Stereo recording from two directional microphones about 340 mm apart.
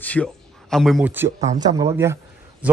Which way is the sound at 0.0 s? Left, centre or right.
Centre.